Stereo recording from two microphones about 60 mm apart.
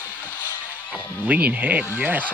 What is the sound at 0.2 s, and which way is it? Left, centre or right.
Music, left.